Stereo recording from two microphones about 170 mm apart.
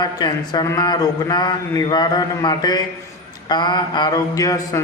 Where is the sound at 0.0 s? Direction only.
25° left (ahead or behind).